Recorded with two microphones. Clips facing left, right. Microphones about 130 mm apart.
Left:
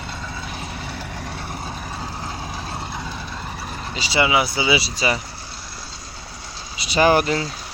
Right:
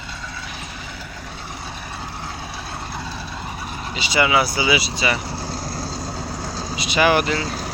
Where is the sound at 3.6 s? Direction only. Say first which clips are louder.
Right 1 dB; 5° right (ahead or behind).